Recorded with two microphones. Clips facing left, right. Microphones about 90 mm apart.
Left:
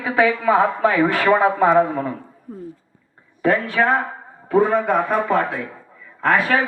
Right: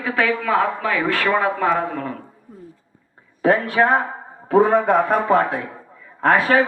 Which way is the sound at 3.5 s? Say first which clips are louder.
Right 1 dB; 15° right (ahead or behind).